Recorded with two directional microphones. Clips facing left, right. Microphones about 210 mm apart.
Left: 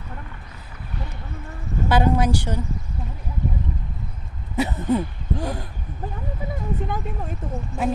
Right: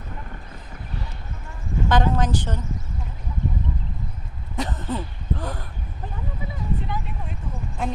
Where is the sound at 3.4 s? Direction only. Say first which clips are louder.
Left 1 dB; 45° right (ahead or behind).